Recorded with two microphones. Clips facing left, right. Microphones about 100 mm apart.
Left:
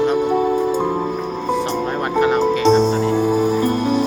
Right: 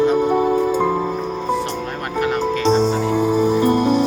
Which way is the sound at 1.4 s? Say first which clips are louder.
Left 5 dB; 20° left (ahead or behind).